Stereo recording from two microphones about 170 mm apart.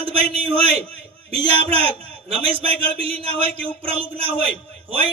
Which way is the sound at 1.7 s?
35° right (ahead or behind).